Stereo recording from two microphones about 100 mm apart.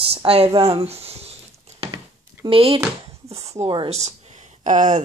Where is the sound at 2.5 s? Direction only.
70° right (ahead or behind).